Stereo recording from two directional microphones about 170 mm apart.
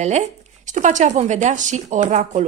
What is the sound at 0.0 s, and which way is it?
A woman's voice, 45° right (ahead or behind).